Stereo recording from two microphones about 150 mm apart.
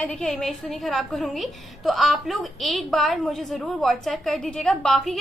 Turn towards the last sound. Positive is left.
turn(degrees=0)  # may be behind; listen again after turning